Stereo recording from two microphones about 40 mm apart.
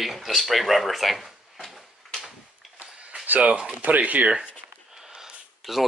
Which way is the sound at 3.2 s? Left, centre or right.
Right.